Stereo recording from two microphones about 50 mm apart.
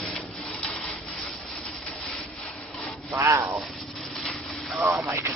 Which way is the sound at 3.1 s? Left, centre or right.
Right.